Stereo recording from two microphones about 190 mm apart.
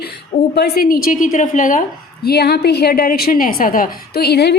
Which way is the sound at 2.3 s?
55° left (ahead or behind).